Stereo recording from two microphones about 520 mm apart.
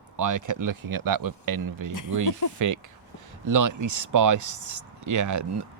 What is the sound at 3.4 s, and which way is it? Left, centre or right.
Speech, right.